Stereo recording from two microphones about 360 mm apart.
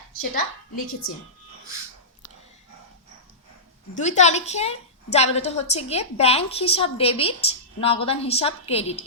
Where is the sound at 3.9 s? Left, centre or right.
Centre.